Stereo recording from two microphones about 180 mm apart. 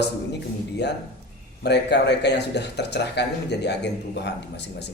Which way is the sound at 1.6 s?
70° left (ahead or behind).